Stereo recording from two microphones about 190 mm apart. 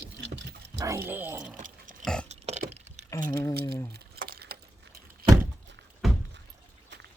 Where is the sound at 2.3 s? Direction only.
35° right (ahead or behind).